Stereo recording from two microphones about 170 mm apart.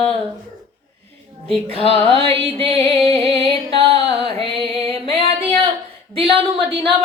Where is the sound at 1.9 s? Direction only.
35° right (ahead or behind).